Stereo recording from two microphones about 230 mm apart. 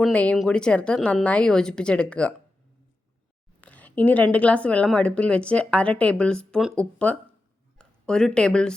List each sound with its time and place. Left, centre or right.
0.0 s a woman's voice: centre
3.6 s a woman's voice: centre